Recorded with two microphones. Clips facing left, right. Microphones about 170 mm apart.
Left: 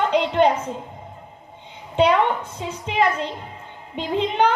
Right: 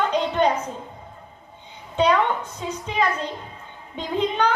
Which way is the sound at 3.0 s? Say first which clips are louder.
Left 3 dB; 25° left (ahead or behind).